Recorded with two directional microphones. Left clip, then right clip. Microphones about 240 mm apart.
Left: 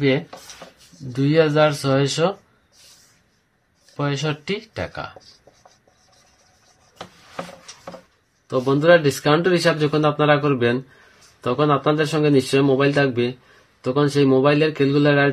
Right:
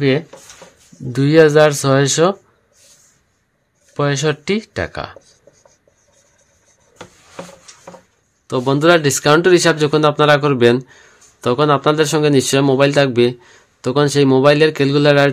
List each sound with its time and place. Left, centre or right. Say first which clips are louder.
1.1 s speech: right 7 dB; right
3.9 s speech: right 7 dB; right
8.5 s speech: right 2 dB; right